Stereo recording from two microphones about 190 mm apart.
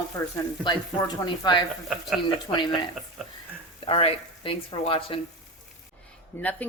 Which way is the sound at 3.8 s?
30° left (ahead or behind).